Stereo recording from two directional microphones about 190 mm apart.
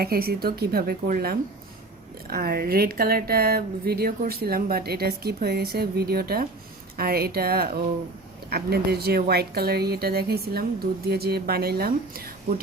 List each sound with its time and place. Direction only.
0.0 s speech: 55° right (ahead or behind)